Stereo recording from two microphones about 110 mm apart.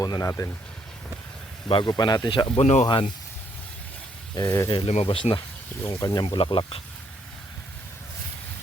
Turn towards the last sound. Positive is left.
turn(degrees=55)  # may be behind; listen again after turning